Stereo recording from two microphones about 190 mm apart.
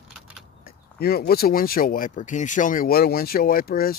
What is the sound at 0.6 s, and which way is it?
Speech, 55° left (ahead or behind).